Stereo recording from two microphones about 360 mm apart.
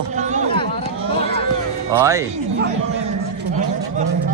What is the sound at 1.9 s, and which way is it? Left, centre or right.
Speech, centre.